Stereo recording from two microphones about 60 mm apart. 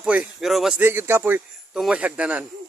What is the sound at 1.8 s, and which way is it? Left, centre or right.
Speech, right.